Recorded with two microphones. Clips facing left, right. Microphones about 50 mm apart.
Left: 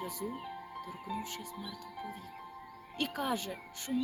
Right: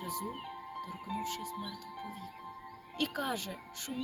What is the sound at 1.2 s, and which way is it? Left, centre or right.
Speech, left.